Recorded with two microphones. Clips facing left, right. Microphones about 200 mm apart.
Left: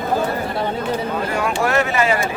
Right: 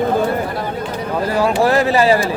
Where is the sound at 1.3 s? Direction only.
30° right (ahead or behind).